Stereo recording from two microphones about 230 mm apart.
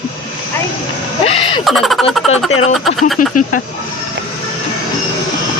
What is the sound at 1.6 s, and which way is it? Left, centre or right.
Speech, centre.